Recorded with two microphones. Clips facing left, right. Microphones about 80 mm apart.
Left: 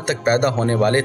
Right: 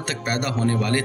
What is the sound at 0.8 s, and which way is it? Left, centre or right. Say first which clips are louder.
Speech: left 6 dB; left.